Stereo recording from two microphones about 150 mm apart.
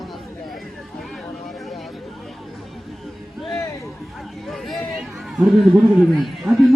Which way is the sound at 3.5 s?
20° left (ahead or behind).